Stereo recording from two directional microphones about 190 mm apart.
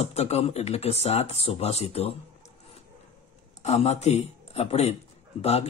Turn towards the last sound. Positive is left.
turn(degrees=35)  # may be behind; listen again after turning